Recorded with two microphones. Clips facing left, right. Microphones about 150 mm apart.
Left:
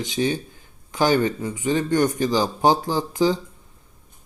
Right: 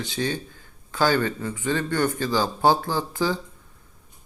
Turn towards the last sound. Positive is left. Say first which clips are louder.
# left 4 dB
turn(degrees=15)  # may be behind; listen again after turning